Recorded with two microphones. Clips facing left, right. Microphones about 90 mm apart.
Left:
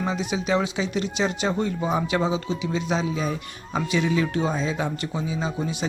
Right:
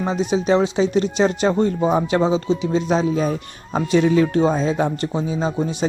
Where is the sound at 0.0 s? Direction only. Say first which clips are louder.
Right 6 dB; 35° right (ahead or behind).